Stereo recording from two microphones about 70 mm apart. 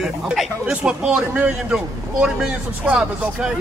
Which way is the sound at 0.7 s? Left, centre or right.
Centre.